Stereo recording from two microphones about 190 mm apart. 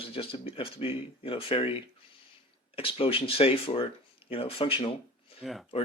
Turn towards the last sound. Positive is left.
turn(degrees=0)  # may be behind; listen again after turning